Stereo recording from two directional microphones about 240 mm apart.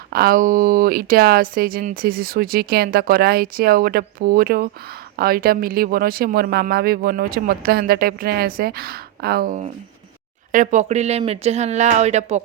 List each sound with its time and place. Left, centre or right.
0.1 s speech: right